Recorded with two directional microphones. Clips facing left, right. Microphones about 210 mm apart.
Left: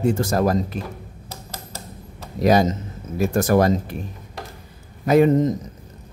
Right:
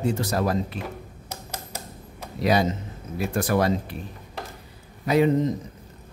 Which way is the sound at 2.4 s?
45° left (ahead or behind).